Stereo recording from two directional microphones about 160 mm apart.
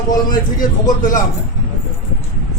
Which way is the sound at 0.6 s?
55° left (ahead or behind).